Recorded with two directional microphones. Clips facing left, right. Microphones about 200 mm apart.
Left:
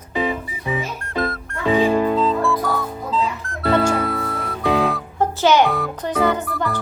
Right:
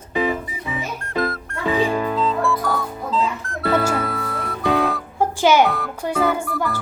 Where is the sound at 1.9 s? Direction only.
25° left (ahead or behind).